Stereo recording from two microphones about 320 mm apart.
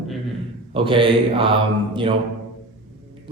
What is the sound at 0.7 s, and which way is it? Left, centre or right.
A man's voice, centre.